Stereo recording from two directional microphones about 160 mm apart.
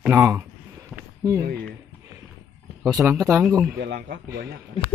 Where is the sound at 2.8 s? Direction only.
Centre (ahead or behind).